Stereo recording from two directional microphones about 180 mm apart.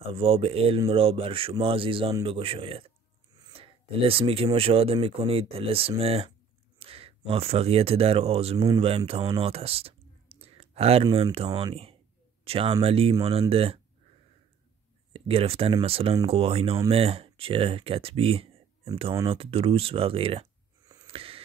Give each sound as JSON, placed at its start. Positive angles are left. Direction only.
{"t": 0.0, "sound": "speech", "side_deg": -30}
{"t": 9.3, "sound": "clicking", "side_deg": -30}
{"t": 11.7, "sound": "speech", "side_deg": -35}
{"t": 15.1, "sound": "speech", "side_deg": -30}
{"t": 20.8, "sound": "a sound", "side_deg": -20}
{"t": 21.1, "sound": "a sound", "side_deg": -30}